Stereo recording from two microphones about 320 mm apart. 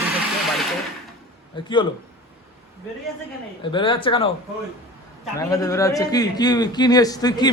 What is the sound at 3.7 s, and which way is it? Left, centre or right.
Speech, centre.